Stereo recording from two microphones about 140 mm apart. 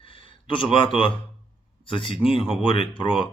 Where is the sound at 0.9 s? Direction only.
35° left (ahead or behind).